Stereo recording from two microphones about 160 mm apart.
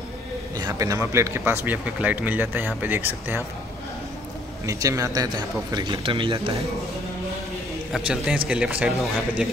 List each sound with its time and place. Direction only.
0.6 s speech: 20° right (ahead or behind)
4.6 s speech: 20° right (ahead or behind)
7.9 s a man's voice: 5° right (ahead or behind)